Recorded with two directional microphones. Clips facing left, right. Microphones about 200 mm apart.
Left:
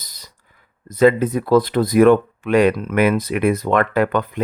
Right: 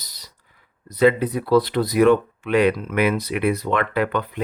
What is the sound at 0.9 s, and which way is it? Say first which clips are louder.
Speech: left 3 dB; 45° left (ahead or behind).